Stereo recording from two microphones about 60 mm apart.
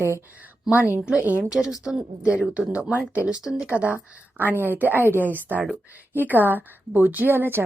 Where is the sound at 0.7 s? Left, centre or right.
Right.